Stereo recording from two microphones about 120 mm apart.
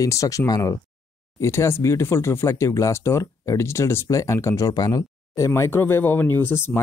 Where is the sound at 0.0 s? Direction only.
25° left (ahead or behind).